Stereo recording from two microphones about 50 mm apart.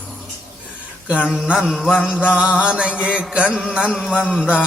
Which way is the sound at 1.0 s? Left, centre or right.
Right.